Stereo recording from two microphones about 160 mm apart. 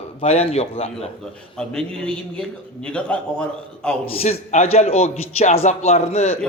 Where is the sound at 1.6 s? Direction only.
5° left (ahead or behind).